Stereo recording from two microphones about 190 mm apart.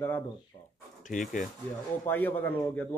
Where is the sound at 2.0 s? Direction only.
10° left (ahead or behind).